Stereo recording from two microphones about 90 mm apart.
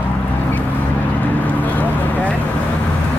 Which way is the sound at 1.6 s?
20° left (ahead or behind).